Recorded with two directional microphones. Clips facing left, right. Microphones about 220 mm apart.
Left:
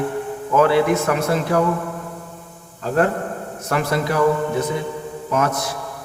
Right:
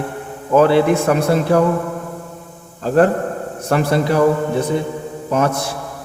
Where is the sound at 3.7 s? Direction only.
30° right (ahead or behind).